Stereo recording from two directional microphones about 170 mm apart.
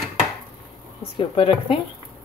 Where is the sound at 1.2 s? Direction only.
30° left (ahead or behind).